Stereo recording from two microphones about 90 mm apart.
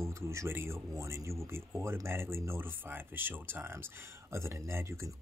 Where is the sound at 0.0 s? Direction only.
30° right (ahead or behind).